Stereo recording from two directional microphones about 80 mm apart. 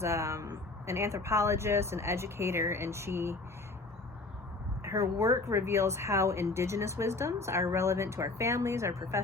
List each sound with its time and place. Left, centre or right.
0.0 s speech: right
4.8 s speech: right